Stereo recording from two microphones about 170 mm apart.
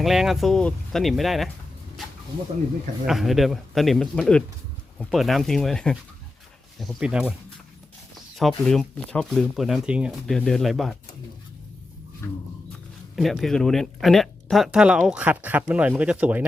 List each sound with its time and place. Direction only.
0.0 s speech: centre (ahead or behind)
3.1 s speech: centre (ahead or behind)
8.4 s speech: centre (ahead or behind)
12.2 s a sound: 15° left (ahead or behind)
13.1 s speech: centre (ahead or behind)